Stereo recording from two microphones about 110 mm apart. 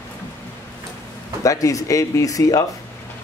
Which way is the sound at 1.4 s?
30° left (ahead or behind).